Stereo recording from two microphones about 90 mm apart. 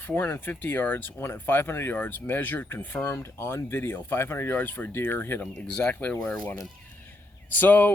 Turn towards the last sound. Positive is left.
turn(degrees=20)  # may be behind; listen again after turning